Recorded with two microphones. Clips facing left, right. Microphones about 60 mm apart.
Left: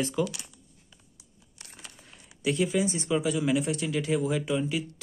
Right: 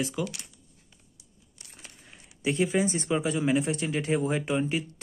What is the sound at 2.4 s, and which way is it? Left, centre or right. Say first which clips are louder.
Speech: right 1 dB; right.